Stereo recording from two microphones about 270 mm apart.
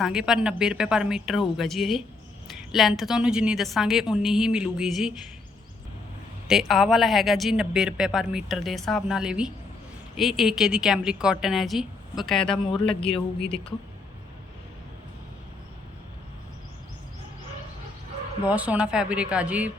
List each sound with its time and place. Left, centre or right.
0.0 s speech: centre
6.5 s speech: centre
12.8 s a man's voice: centre
18.4 s speech: centre